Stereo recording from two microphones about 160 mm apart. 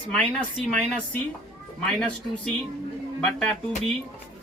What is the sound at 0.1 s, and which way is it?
Speech, 5° left (ahead or behind).